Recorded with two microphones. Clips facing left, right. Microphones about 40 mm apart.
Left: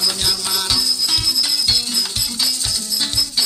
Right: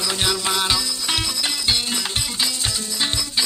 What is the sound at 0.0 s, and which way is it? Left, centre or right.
Music, right.